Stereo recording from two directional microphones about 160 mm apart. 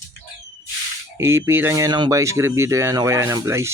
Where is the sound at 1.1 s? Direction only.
15° right (ahead or behind).